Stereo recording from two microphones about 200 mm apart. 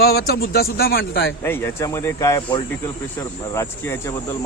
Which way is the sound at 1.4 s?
10° left (ahead or behind).